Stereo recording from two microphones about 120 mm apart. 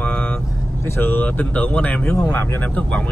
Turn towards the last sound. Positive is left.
turn(degrees=10)  # may be behind; listen again after turning